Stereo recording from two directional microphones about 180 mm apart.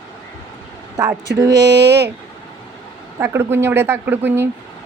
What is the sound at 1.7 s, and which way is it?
Speech, 75° right (ahead or behind).